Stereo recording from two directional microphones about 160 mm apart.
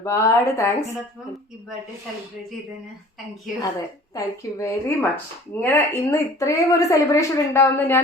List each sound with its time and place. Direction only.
0.0 s speech: 20° left (ahead or behind)
4.1 s speech: 20° left (ahead or behind)